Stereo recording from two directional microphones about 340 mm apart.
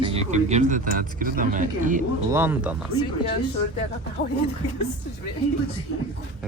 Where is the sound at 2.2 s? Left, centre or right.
Centre.